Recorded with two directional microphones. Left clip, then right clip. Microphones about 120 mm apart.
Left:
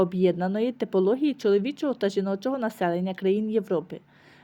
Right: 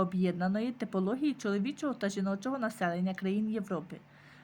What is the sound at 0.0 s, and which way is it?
A woman's voice, 25° left (ahead or behind).